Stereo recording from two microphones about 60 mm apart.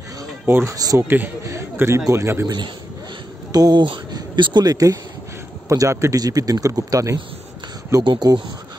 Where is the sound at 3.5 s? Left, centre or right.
Right.